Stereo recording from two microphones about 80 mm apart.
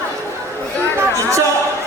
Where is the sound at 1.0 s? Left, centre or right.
Right.